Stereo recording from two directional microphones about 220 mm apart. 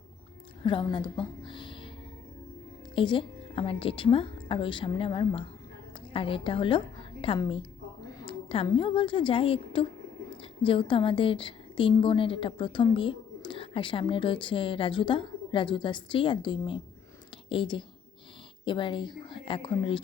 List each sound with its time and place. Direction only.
0.6 s a woman's voice: 20° left (ahead or behind)
2.9 s a woman's voice: 20° left (ahead or behind)